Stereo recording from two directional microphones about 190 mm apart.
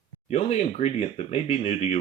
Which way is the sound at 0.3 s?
35° left (ahead or behind).